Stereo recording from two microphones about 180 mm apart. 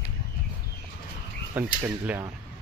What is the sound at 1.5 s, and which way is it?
Speech, 10° right (ahead or behind).